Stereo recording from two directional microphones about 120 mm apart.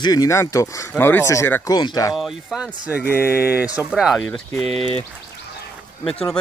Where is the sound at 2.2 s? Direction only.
5° right (ahead or behind).